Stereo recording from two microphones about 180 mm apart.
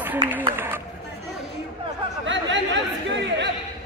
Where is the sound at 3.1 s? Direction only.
80° right.